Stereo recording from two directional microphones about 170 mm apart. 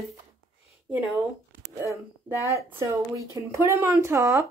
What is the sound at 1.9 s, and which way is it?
Speech, 15° right (ahead or behind).